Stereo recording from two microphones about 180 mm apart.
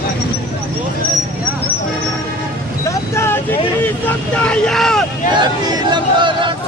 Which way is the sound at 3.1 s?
15° left (ahead or behind).